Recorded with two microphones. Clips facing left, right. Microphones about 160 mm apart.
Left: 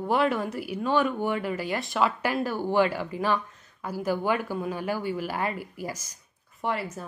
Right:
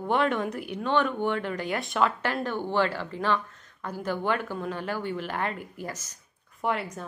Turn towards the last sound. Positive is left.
turn(degrees=0)  # may be behind; listen again after turning